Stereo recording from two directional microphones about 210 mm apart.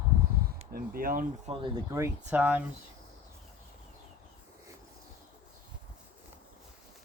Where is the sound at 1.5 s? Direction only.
20° right (ahead or behind).